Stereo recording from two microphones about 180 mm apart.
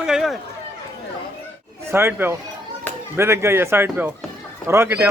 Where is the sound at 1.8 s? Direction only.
15° right (ahead or behind).